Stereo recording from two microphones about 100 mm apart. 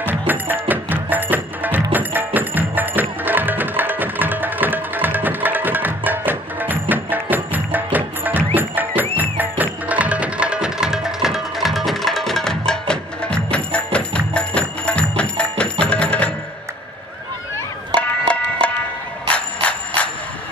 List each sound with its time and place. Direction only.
0.3 s music: 20° right (ahead or behind); by 16.3 s 10° left (ahead or behind)
17.9 s music: 10° left (ahead or behind)
19.2 s bicycle bell: 10° left (ahead or behind)